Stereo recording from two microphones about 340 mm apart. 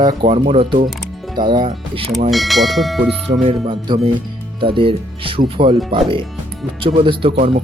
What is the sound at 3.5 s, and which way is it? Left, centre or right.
Speech, centre.